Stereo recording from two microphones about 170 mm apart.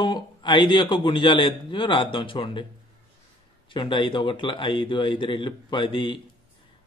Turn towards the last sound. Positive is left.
turn(degrees=30)  # may be behind; listen again after turning